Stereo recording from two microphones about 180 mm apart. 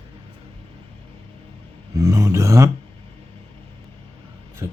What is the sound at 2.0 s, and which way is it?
Speech, 15° right (ahead or behind).